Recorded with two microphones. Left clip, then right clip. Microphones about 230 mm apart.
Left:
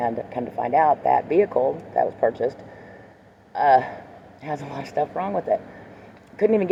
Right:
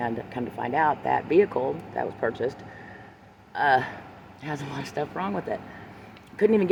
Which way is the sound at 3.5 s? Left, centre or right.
Right.